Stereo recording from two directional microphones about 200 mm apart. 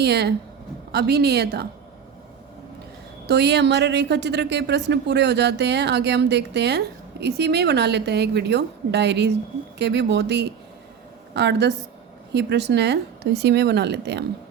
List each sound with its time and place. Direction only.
0.0 s a woman's voice: 55° right (ahead or behind)
3.2 s a woman's voice: 55° right (ahead or behind)